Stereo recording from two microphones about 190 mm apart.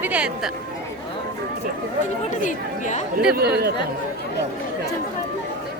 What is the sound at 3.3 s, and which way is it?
Speech, 55° right (ahead or behind).